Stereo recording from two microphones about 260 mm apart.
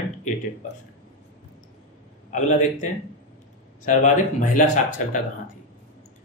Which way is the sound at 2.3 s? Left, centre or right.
Left.